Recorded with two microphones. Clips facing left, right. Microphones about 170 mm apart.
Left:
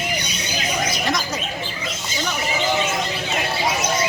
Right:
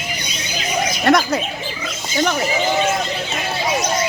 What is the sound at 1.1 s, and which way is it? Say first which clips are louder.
Speech: right 12 dB; 60° right (ahead or behind).